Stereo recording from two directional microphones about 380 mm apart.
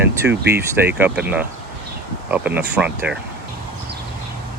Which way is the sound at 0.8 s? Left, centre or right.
Centre.